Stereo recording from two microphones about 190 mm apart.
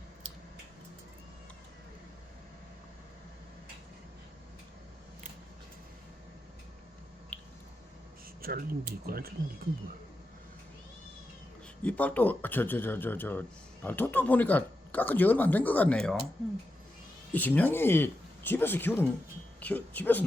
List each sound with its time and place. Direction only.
7.3 s squish: 5° left (ahead or behind)
8.4 s speech: 50° right (ahead or behind)
11.8 s speech: 5° left (ahead or behind)
17.3 s speech: 10° left (ahead or behind)